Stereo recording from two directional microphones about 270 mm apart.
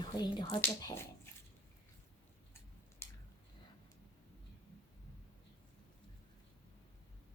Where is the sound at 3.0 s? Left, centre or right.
Centre.